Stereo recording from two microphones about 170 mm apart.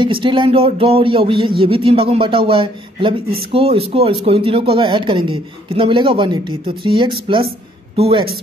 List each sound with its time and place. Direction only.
0.0 s speech: 30° right (ahead or behind)